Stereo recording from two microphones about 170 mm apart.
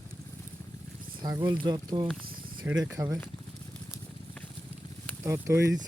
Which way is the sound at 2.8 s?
15° right (ahead or behind).